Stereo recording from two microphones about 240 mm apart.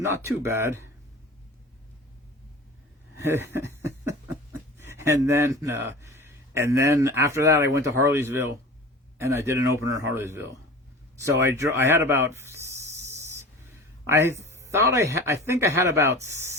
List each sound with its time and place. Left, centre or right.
0.0 s speech: centre
3.2 s a sound: centre
4.8 s speech: centre
11.2 s snake: centre
14.1 s speech: centre